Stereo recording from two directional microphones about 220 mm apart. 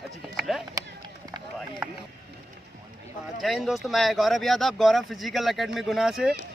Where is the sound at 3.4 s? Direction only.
Centre (ahead or behind).